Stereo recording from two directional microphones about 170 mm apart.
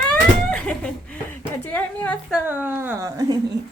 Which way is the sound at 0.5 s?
5° left (ahead or behind).